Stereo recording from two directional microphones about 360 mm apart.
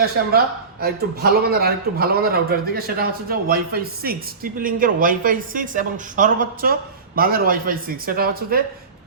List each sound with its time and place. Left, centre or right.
0.0 s a man's voice: right